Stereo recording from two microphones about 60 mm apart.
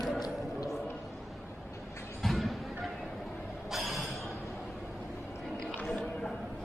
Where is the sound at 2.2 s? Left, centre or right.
Centre.